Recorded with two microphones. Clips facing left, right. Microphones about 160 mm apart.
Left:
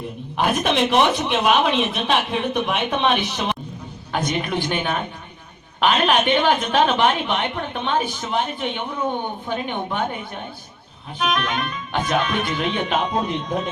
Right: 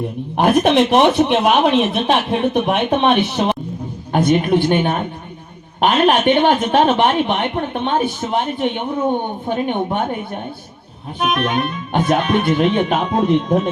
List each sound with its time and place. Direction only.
0.6 s speech: 55° right (ahead or behind)
4.7 s a man's voice: 40° right (ahead or behind)
11.2 s speech: 50° right (ahead or behind)